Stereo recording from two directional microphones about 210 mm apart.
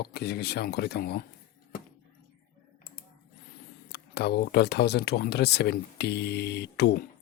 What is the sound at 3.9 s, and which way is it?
Speech, 50° left (ahead or behind).